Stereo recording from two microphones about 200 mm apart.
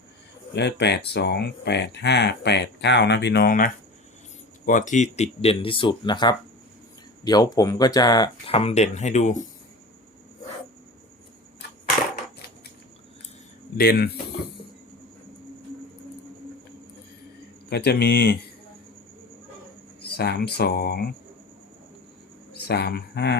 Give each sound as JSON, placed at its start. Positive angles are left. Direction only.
{"t": 0.5, "sound": "speech", "side_deg": 55}
{"t": 13.7, "sound": "speech", "side_deg": 50}
{"t": 17.7, "sound": "speech", "side_deg": 55}
{"t": 20.0, "sound": "speech", "side_deg": 55}
{"t": 22.5, "sound": "speech", "side_deg": 55}